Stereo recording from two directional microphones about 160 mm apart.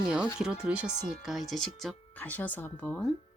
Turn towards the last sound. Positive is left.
turn(degrees=10)  # may be behind; listen again after turning